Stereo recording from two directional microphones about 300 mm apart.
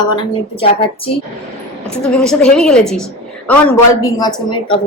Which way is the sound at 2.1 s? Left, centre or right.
Centre.